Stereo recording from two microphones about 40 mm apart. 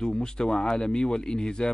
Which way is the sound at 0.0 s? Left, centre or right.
Centre.